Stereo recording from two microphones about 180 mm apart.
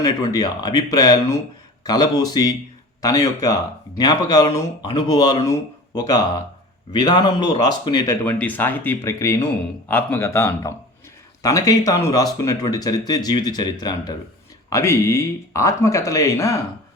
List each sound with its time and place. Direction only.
0.0 s speech: 20° left (ahead or behind)